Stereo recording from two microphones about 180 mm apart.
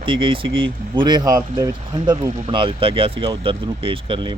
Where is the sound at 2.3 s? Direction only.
40° right (ahead or behind).